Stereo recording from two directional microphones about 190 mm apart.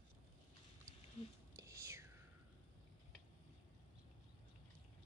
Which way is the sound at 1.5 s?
15° right (ahead or behind).